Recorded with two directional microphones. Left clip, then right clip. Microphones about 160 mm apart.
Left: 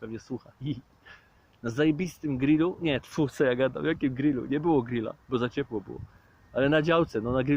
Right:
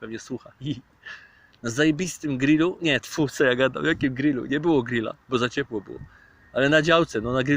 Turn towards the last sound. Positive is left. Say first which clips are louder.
# right 3 dB
turn(degrees=-10)  # may be behind; listen again after turning